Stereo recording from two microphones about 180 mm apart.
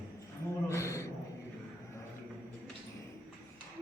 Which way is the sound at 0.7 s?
15° left (ahead or behind).